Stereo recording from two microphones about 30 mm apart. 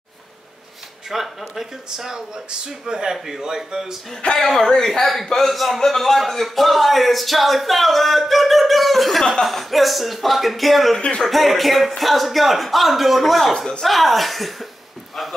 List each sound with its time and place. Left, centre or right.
1.1 s speech: centre
4.2 s speech: left
4.6 s speech: centre
5.0 s speech: centre